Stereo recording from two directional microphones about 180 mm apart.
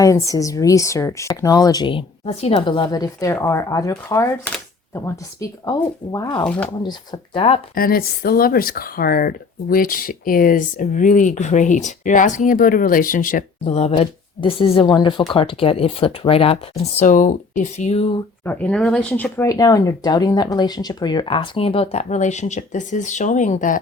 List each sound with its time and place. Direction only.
0.0 s speech: 15° left (ahead or behind)
6.4 s speech: 5° left (ahead or behind)
6.8 s speech: 25° left (ahead or behind)
7.8 s speech: 55° left (ahead or behind)
13.7 s speech: 35° left (ahead or behind)
17.0 s speech: 45° left (ahead or behind)
18.4 s speech: 10° left (ahead or behind)
19.5 s speech: 20° left (ahead or behind); by 23.8 s 45° left (ahead or behind)